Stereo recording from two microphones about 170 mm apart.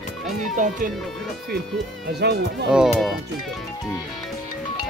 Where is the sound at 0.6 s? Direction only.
45° right (ahead or behind).